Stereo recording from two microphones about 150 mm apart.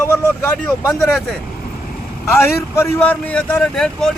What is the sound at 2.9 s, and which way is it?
Speech, 10° left (ahead or behind).